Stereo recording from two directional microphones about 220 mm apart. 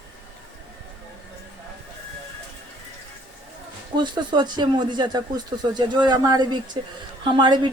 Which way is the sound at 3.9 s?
20° right (ahead or behind).